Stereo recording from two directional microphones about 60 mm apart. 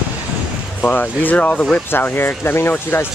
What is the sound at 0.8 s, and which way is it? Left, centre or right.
Speech, left.